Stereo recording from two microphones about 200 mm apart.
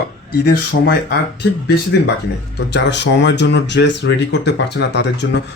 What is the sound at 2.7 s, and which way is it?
Speech, 60° left (ahead or behind).